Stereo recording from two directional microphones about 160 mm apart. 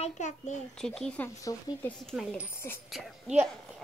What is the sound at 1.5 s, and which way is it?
Speech, 25° left (ahead or behind).